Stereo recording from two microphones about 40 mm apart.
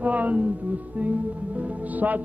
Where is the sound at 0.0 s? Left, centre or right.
Right.